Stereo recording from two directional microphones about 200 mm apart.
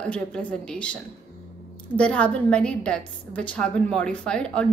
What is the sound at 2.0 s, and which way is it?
A woman's voice, 5° left (ahead or behind).